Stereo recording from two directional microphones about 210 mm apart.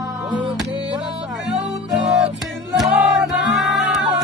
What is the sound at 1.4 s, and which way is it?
Music, centre (ahead or behind).